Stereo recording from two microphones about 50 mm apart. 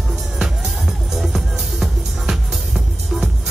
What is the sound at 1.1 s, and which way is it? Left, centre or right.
Music, centre.